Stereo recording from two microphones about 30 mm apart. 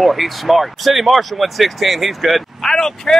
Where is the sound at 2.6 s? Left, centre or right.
Left.